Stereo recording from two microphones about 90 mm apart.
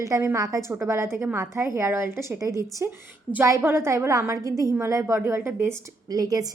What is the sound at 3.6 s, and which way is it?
A woman's voice, 25° right (ahead or behind).